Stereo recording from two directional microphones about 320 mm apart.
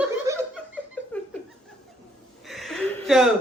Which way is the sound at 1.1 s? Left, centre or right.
Centre.